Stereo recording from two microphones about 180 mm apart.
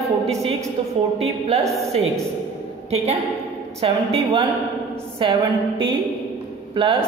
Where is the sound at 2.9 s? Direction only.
35° right (ahead or behind).